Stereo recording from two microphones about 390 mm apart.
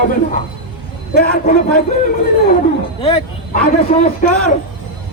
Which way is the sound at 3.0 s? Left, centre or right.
Centre.